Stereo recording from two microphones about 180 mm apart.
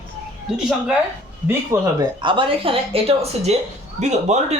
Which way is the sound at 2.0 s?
30° right (ahead or behind).